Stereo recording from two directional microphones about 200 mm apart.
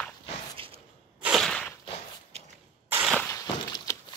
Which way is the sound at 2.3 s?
30° right (ahead or behind).